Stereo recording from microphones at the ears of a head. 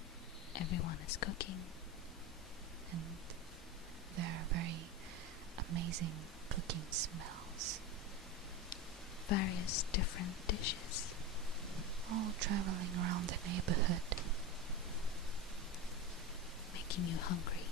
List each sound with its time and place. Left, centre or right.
0.5 s speech: left
4.1 s speech: right
9.3 s speech: left
12.1 s speech: right
16.7 s whispering: left